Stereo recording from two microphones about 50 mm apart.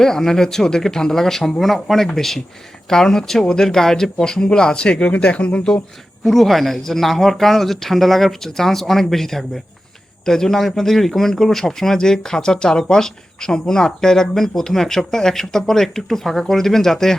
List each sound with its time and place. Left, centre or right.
0.0 s a man's voice: centre
6.2 s a man's voice: centre